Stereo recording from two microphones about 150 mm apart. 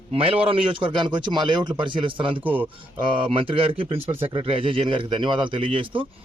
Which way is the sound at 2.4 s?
10° right (ahead or behind).